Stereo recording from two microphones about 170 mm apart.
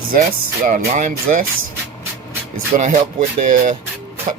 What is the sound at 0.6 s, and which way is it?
Speech, 45° right (ahead or behind).